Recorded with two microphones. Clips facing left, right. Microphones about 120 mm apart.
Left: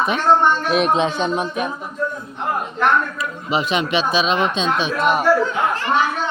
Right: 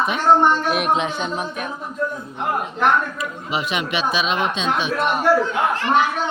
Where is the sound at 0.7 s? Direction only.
25° left (ahead or behind).